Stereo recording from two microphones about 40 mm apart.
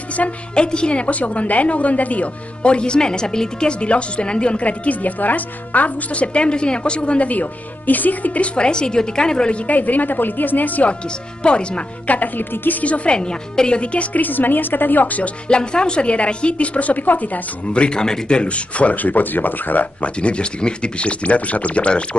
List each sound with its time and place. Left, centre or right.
0.2 s speech: left
2.6 s speech: left
8.5 s speech: left
9.7 s a woman's voice: left
11.4 s speech: left
12.1 s a woman's voice: left
12.8 s speech: left
13.1 s speech: left
14.2 s a woman's voice: left
15.4 s speech: left
17.7 s speech: left
20.2 s speech: left